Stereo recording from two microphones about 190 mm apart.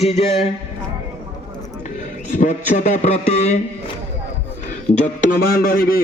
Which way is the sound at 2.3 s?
40° left (ahead or behind).